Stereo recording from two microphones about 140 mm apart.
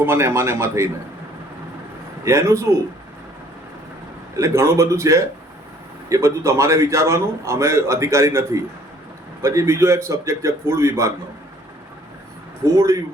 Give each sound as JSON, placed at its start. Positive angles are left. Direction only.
{"t": 0.0, "sound": "speech", "side_deg": -15}
{"t": 2.2, "sound": "a man's voice", "side_deg": -20}
{"t": 4.4, "sound": "a man's voice", "side_deg": -20}
{"t": 12.7, "sound": "a man's voice", "side_deg": -20}